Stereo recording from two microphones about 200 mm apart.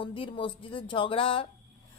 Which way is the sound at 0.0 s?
25° left (ahead or behind).